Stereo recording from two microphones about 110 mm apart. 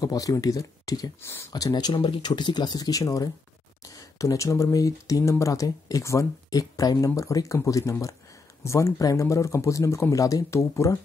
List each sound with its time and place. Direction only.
0.0 s speech: 30° left (ahead or behind)